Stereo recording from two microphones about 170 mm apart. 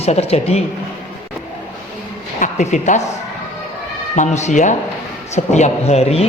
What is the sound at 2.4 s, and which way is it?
Speech, 45° left (ahead or behind).